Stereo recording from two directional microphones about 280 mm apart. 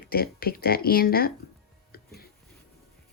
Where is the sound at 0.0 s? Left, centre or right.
Left.